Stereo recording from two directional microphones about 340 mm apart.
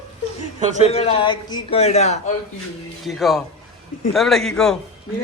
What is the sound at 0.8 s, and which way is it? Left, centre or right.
A man's voice, centre.